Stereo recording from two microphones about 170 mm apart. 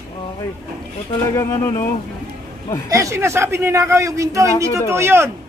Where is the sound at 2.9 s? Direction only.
20° right (ahead or behind).